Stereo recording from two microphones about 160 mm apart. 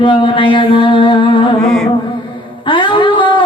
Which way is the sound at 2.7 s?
30° left (ahead or behind).